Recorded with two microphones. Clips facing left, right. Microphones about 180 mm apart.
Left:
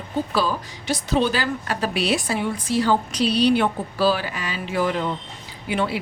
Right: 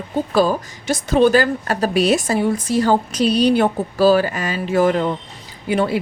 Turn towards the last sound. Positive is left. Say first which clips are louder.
# right 5 dB
turn(degrees=-40)  # may be behind; listen again after turning